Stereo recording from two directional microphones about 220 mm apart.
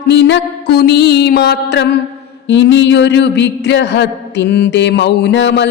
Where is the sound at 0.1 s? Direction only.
55° left (ahead or behind).